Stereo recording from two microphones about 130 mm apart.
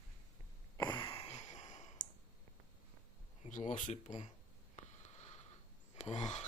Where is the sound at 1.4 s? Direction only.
65° left (ahead or behind).